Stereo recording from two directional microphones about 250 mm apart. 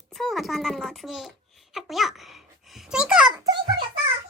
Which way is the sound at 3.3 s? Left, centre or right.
Centre.